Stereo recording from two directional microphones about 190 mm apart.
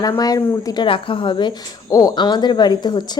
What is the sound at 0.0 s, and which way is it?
A woman's voice, 20° left (ahead or behind).